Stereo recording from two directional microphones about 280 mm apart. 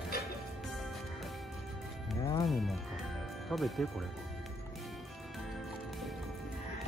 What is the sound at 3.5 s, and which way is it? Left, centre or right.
Speech, centre.